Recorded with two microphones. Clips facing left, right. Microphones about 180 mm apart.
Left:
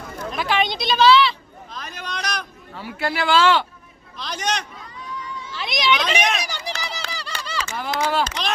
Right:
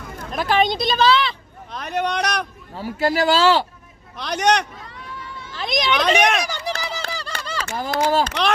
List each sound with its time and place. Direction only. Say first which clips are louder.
0.3 s speech: right 4 dB; 45° right (ahead or behind)
1.7 s speech: right 10 dB; 65° right (ahead or behind)
2.7 s speech: right 5 dB; 40° right (ahead or behind)
4.2 s speech: right 7 dB; 65° right (ahead or behind)
5.5 s speech: right 1 dB; 45° right (ahead or behind)
6.2 s a sound: right 4 dB; 55° right (ahead or behind)
8.2 s speech: right 4 dB; 60° right (ahead or behind)